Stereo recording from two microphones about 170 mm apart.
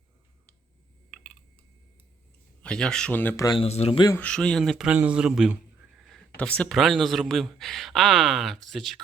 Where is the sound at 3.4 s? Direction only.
30° left (ahead or behind).